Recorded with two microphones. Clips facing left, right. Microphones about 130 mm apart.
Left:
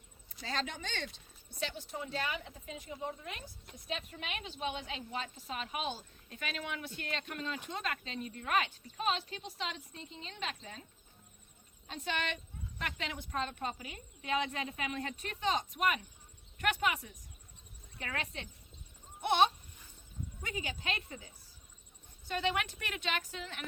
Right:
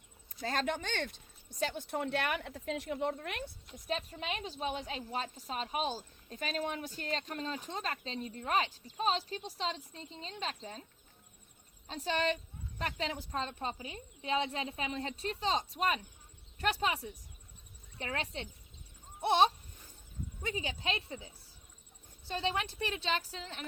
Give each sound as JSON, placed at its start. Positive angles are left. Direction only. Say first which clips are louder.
{"t": 0.4, "sound": "speech", "louder": "right 5 dB", "side_deg": -50}
{"t": 3.8, "sound": "speech", "louder": "right 4 dB", "side_deg": -35}
{"t": 11.9, "sound": "a woman's voice", "louder": "right 5 dB", "side_deg": -35}
{"t": 22.3, "sound": "speech", "louder": "left 1 dB", "side_deg": -30}